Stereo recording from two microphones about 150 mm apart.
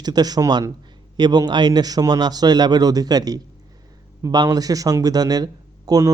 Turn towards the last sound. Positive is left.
turn(degrees=-25)  # may be behind; listen again after turning